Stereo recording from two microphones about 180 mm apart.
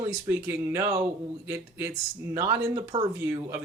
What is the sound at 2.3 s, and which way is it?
Speech, 15° right (ahead or behind).